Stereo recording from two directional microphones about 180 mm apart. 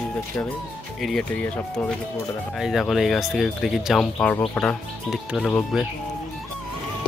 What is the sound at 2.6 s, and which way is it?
Speech, centre (ahead or behind).